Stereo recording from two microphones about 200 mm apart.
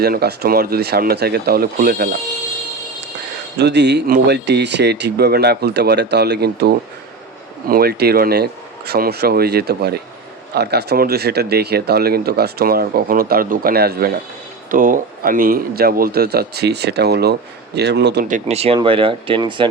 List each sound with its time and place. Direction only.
0.0 s speech: 50° right (ahead or behind)
3.6 s speech: 60° right (ahead or behind)
18.3 s speech: 35° right (ahead or behind)